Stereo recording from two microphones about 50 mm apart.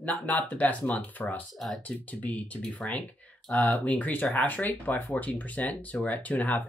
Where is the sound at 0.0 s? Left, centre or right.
Left.